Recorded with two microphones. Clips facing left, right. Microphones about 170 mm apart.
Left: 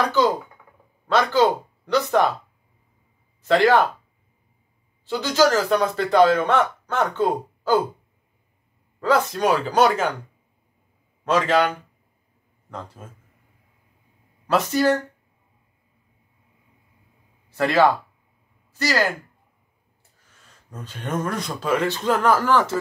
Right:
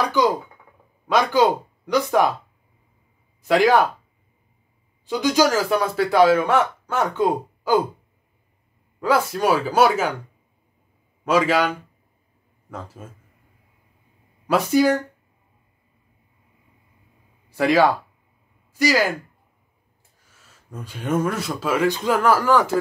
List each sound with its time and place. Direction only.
1.0 s speech: 10° right (ahead or behind)
3.4 s speech: 10° right (ahead or behind)
5.0 s speech: 15° right (ahead or behind)
9.0 s speech: 10° right (ahead or behind)
11.2 s speech: 10° right (ahead or behind)
14.5 s speech: 10° right (ahead or behind)
17.5 s speech: 10° right (ahead or behind)
20.3 s speech: 10° right (ahead or behind)